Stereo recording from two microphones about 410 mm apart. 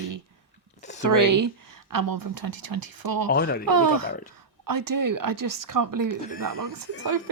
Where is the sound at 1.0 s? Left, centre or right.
Right.